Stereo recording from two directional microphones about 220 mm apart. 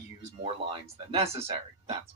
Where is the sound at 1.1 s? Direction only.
25° right (ahead or behind).